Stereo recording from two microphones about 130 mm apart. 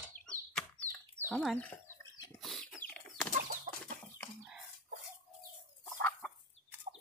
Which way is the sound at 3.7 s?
75° right (ahead or behind).